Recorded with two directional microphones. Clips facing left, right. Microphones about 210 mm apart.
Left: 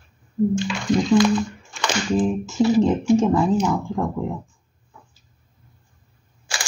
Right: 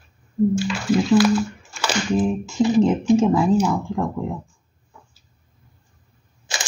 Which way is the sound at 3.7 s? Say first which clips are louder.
Even; centre (ahead or behind).